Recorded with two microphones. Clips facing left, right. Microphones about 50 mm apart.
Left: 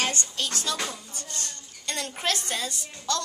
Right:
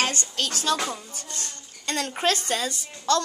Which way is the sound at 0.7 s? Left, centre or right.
Right.